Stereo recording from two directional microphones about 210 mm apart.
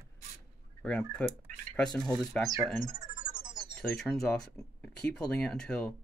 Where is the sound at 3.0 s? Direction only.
20° right (ahead or behind).